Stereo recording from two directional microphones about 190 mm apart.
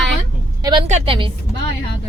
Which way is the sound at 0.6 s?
25° right (ahead or behind).